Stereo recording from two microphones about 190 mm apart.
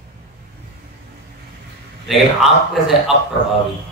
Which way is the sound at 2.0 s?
Centre (ahead or behind).